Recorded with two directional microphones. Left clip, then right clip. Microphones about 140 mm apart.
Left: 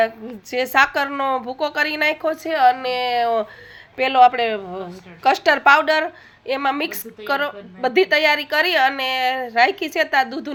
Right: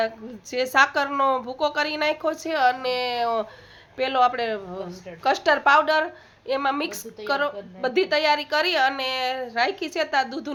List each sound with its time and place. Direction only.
0.5 s a woman's voice: 5° left (ahead or behind)